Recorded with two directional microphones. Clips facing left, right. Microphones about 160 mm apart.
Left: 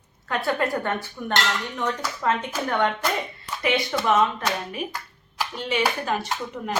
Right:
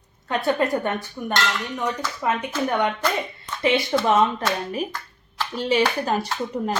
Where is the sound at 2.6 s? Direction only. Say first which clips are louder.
Right 1 dB; 15° right (ahead or behind).